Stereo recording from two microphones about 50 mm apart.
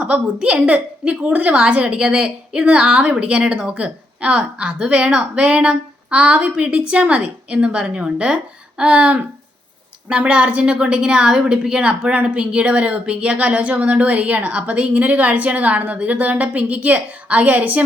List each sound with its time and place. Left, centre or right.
0.0 s a woman's voice: right